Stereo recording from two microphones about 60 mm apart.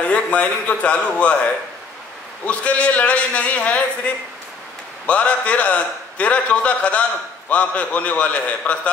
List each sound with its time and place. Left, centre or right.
0.0 s a man's voice: left
2.4 s a man's voice: left